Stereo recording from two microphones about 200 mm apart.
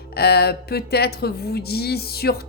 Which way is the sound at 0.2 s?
50° left (ahead or behind).